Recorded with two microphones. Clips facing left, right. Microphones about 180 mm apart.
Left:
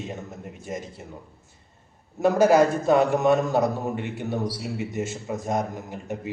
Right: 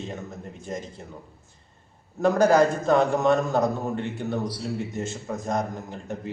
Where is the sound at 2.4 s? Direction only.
10° left (ahead or behind).